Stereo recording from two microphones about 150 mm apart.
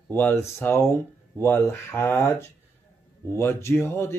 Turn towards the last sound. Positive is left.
turn(degrees=15)  # may be behind; listen again after turning